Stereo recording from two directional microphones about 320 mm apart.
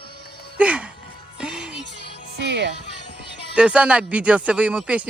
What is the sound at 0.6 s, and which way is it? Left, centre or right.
Speech, centre.